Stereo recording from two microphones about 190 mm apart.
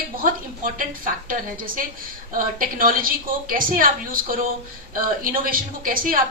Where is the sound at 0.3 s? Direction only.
45° right (ahead or behind).